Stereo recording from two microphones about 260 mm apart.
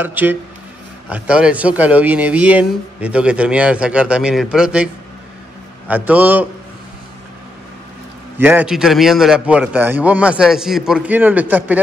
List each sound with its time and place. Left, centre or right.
0.0 s a man's voice: centre
5.9 s a man's voice: centre
8.4 s a man's voice: centre